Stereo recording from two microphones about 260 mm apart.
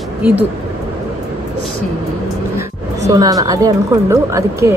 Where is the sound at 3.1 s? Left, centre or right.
Centre.